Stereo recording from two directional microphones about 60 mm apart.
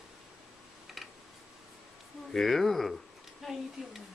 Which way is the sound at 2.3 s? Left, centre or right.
Centre.